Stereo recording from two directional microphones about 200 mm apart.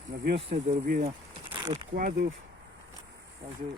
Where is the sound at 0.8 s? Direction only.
45° right (ahead or behind).